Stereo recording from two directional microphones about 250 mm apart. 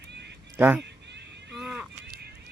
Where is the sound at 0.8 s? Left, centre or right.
Right.